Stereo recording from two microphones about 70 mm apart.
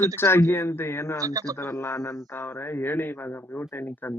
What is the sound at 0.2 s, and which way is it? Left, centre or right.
Speech, left.